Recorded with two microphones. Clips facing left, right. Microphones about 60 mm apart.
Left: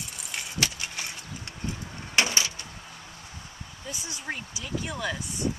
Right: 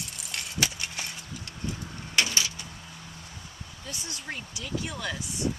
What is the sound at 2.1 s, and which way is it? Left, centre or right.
Door, left.